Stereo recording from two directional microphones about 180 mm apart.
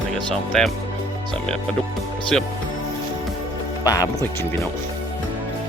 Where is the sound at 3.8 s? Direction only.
20° left (ahead or behind).